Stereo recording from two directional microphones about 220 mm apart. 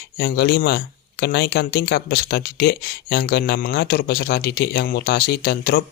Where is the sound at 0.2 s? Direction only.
50° left (ahead or behind).